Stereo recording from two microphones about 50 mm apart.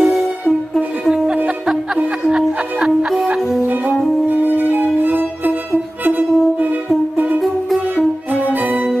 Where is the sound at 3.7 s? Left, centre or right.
Right.